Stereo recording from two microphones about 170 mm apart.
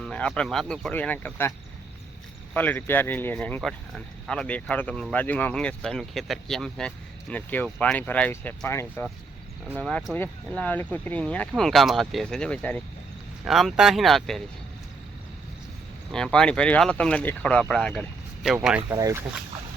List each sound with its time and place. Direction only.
0.0 s speech: 5° left (ahead or behind)
16.1 s speech: 5° left (ahead or behind)
18.9 s speech: 20° right (ahead or behind)